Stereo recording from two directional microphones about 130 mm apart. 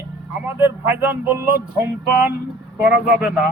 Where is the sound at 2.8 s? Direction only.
5° right (ahead or behind).